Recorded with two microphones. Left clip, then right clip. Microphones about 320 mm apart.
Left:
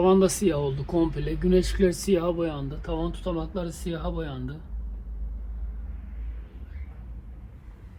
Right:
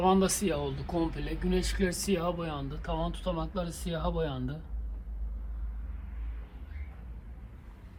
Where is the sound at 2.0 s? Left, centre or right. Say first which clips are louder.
Left 7 dB; centre.